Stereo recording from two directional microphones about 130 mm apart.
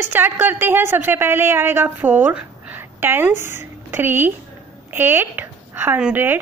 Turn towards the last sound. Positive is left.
turn(degrees=-15)  # may be behind; listen again after turning